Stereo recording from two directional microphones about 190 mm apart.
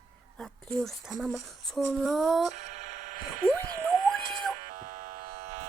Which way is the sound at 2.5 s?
40° right (ahead or behind).